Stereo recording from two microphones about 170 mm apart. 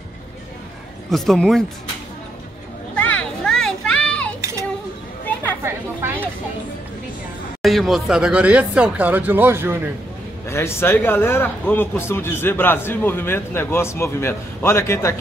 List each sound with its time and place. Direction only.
1.1 s speech: centre (ahead or behind)
3.0 s children playing: 10° left (ahead or behind)
4.4 s a sound: 15° right (ahead or behind)
5.2 s chatter: 10° left (ahead or behind)
5.6 s chatter: 15° right (ahead or behind)
7.6 s speech: centre (ahead or behind)
10.4 s speech: 15° left (ahead or behind)